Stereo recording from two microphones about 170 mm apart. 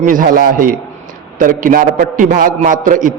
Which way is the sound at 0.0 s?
50° right (ahead or behind).